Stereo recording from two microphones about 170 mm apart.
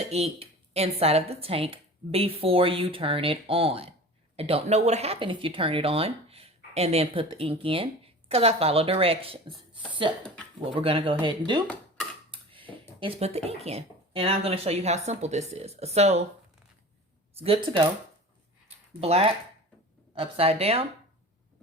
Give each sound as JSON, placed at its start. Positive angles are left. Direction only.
{"t": 0.1, "sound": "a woman's voice", "side_deg": -35}
{"t": 12.3, "sound": "dishes", "side_deg": -30}
{"t": 13.0, "sound": "a woman's voice", "side_deg": -35}
{"t": 17.3, "sound": "a woman's voice", "side_deg": -35}
{"t": 18.9, "sound": "a woman's voice", "side_deg": -35}